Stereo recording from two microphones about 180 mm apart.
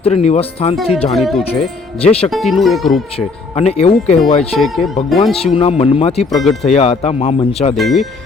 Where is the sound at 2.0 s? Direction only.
35° left (ahead or behind).